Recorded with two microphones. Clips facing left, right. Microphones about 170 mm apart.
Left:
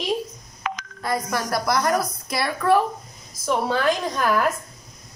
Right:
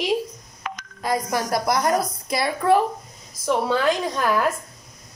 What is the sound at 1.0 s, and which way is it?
A woman's voice, 20° right (ahead or behind).